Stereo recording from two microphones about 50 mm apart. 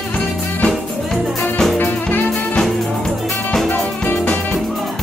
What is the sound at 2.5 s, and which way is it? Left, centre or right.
Music, centre.